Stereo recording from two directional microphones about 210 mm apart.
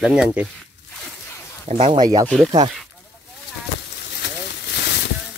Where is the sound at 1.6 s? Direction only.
35° right (ahead or behind).